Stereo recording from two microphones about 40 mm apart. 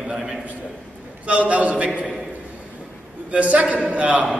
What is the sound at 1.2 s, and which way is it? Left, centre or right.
Speech, right.